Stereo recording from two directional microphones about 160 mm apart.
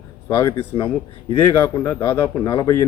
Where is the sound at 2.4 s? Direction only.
25° left (ahead or behind).